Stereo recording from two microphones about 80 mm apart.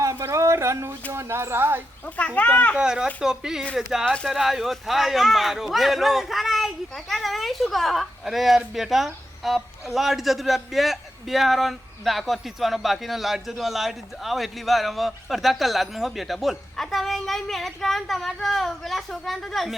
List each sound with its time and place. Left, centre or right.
0.0 s a sound: right
1.1 s speech: right
2.0 s a child's voice: centre
2.7 s speech: centre
4.0 s speech: centre
4.4 s speech: centre